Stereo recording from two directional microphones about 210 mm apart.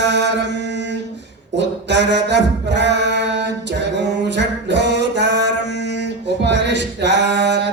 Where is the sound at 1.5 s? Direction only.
55° right (ahead or behind).